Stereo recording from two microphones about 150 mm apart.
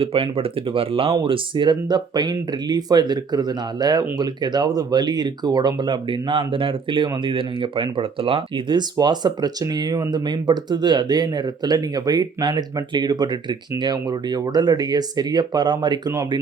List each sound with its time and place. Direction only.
0.0 s speech: 40° right (ahead or behind)